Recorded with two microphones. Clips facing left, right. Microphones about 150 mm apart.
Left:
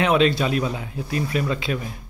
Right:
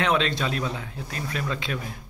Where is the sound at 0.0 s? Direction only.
10° left (ahead or behind).